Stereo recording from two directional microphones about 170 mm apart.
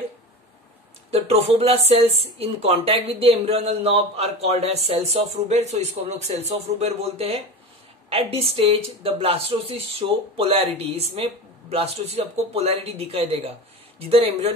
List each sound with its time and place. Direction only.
1.1 s a woman's voice: 35° right (ahead or behind)